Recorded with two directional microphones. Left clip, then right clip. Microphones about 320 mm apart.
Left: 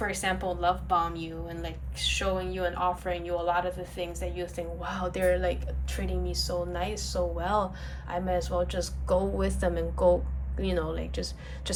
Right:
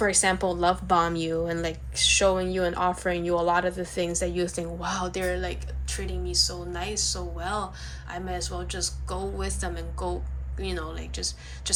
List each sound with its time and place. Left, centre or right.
0.0 s a woman's voice: centre